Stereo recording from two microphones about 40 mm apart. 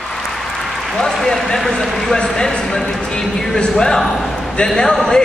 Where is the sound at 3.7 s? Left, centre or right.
Centre.